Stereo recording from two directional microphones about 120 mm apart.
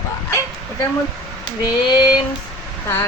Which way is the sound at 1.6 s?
35° left (ahead or behind).